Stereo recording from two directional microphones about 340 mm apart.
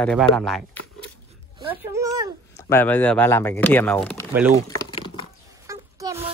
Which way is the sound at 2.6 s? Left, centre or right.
Centre.